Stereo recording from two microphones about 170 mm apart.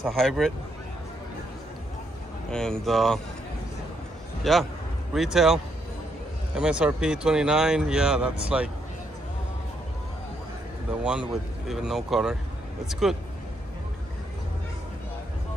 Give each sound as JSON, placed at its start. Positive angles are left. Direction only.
{"t": 0.0, "sound": "speech", "side_deg": 0}
{"t": 2.5, "sound": "speech", "side_deg": 5}
{"t": 4.4, "sound": "speech", "side_deg": 0}
{"t": 10.9, "sound": "speech", "side_deg": -5}